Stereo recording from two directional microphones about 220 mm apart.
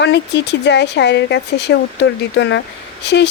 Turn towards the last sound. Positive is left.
turn(degrees=50)  # may be behind; listen again after turning